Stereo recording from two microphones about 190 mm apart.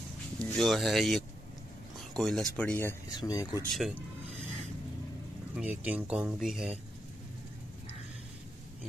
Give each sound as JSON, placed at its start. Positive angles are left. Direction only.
{"t": 0.4, "sound": "speech", "side_deg": 0}
{"t": 3.7, "sound": "speech", "side_deg": 0}
{"t": 5.6, "sound": "speech", "side_deg": -5}